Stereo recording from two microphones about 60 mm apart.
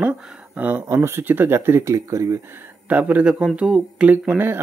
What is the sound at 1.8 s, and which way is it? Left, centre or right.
Speech, right.